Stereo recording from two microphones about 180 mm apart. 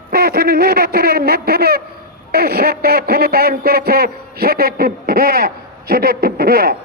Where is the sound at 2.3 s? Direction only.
60° right (ahead or behind).